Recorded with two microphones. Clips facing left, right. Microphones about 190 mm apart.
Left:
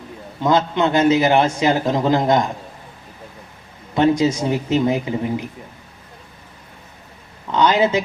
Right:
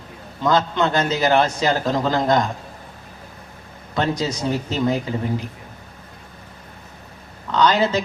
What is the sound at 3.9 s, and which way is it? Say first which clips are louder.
Speech: left 7 dB; 25° left (ahead or behind).